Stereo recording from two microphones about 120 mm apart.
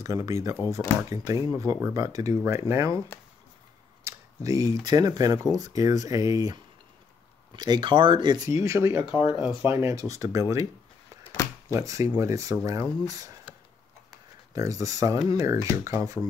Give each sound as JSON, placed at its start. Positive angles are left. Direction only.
{"t": 0.0, "sound": "speech", "side_deg": -25}
{"t": 4.0, "sound": "a sound", "side_deg": -30}
{"t": 4.8, "sound": "speech", "side_deg": -35}
{"t": 8.5, "sound": "speech", "side_deg": -25}
{"t": 9.1, "sound": "speech", "side_deg": 45}
{"t": 9.6, "sound": "speech", "side_deg": -20}
{"t": 11.7, "sound": "speech", "side_deg": -25}
{"t": 14.5, "sound": "speech", "side_deg": -30}